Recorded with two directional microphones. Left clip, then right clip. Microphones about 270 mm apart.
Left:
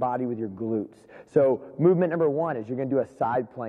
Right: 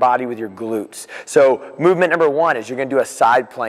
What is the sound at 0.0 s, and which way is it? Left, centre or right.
A man's voice, centre.